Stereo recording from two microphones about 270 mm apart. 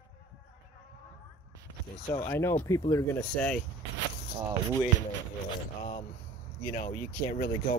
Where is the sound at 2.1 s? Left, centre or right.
Centre.